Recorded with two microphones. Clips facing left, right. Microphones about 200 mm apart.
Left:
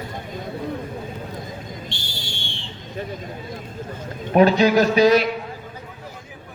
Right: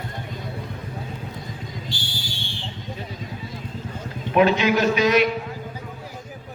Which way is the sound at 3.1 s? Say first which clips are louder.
Left 2 dB; 50° left (ahead or behind).